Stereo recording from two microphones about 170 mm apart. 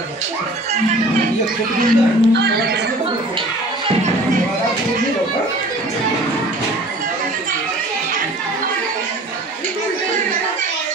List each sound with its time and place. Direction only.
1.8 s speech: 70° right (ahead or behind)